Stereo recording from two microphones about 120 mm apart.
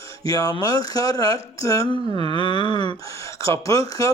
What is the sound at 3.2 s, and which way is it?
Speech, 25° left (ahead or behind).